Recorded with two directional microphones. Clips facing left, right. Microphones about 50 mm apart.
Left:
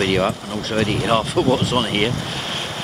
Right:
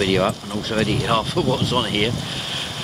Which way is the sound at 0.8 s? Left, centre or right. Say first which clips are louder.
Left 3 dB; centre.